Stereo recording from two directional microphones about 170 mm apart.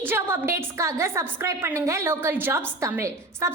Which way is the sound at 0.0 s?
15° right (ahead or behind).